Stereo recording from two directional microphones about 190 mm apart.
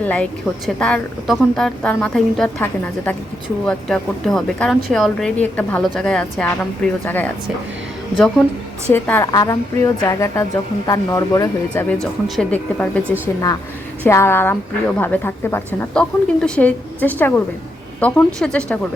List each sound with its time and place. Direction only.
0.0 s a woman's voice: 5° left (ahead or behind)
8.9 s a woman's voice: 10° left (ahead or behind)
11.9 s a woman's voice: 5° left (ahead or behind)